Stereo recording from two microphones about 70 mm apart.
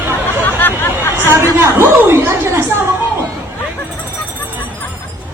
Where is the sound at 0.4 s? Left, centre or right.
Left.